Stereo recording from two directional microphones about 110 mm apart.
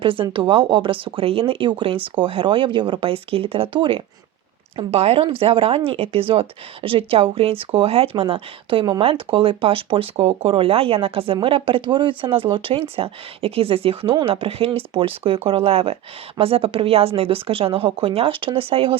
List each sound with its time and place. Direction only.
0.0 s speech: 50° right (ahead or behind)
4.8 s speech: 65° right (ahead or behind)